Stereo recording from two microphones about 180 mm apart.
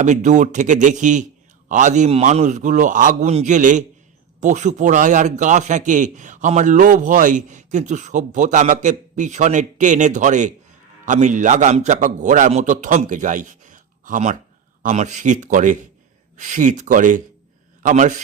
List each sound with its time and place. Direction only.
0.0 s a man's voice: 40° right (ahead or behind)